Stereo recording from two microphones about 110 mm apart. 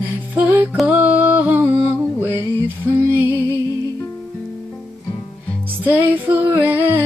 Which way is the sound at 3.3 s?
25° left (ahead or behind).